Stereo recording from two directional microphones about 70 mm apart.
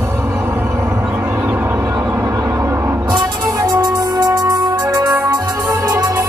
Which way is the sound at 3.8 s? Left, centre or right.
Right.